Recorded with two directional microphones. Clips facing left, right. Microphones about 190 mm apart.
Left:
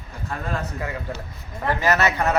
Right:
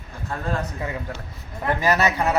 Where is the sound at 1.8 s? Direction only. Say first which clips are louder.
Even; 15° right (ahead or behind).